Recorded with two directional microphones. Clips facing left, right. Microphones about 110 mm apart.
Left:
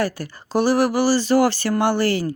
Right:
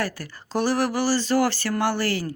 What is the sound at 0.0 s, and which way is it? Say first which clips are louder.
Speech: left 5 dB; 15° left (ahead or behind).